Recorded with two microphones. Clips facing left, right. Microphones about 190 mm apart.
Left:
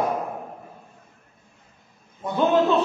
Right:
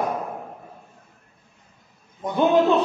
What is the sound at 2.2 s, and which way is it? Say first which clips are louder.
Speech: right 2 dB; 15° right (ahead or behind).